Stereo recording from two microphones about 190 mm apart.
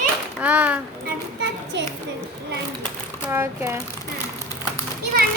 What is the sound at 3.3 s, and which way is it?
Speech, 15° right (ahead or behind).